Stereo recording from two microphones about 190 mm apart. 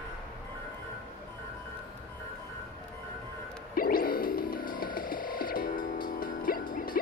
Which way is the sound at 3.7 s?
50° left (ahead or behind).